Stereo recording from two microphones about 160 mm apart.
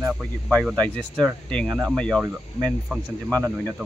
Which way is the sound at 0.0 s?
5° left (ahead or behind).